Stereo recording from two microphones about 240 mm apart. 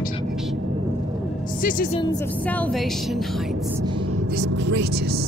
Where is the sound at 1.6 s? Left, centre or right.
Left.